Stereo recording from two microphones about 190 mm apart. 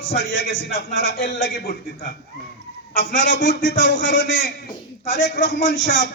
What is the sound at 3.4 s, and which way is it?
Speech, 75° left (ahead or behind).